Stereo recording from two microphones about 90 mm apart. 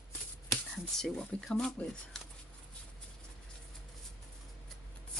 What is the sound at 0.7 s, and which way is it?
Speech, centre (ahead or behind).